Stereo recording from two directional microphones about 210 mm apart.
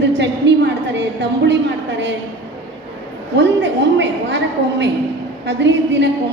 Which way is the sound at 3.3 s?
55° right (ahead or behind).